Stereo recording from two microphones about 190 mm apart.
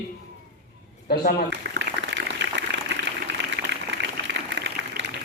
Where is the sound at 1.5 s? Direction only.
65° right (ahead or behind).